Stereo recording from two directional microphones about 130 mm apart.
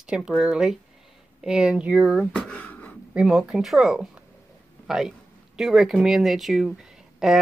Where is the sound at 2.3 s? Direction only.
10° left (ahead or behind).